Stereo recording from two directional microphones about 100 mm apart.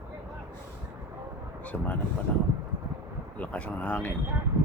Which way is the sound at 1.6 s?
15° left (ahead or behind).